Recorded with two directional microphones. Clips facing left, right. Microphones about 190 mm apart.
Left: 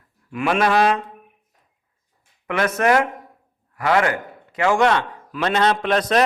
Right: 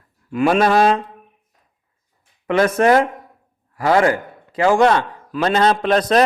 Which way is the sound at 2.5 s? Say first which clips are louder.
Right 4 dB; 30° right (ahead or behind).